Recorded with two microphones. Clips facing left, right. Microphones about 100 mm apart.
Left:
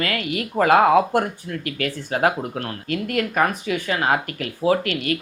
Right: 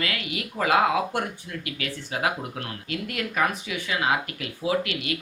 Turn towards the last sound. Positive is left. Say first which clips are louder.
# left 6 dB
turn(degrees=45)  # may be behind; listen again after turning